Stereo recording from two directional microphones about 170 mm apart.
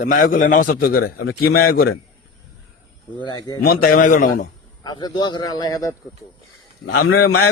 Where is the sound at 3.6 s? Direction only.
60° left (ahead or behind).